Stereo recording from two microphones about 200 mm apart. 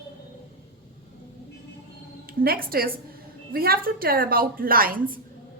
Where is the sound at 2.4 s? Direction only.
45° right (ahead or behind).